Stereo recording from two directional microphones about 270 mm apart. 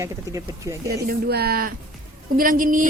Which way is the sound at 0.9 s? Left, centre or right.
Right.